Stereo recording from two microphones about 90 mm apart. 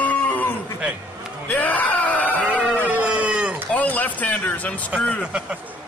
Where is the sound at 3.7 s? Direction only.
20° left (ahead or behind).